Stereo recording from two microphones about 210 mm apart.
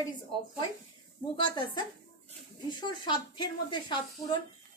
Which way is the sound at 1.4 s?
20° left (ahead or behind).